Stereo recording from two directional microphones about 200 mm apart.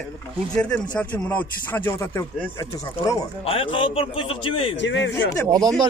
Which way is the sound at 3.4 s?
25° left (ahead or behind).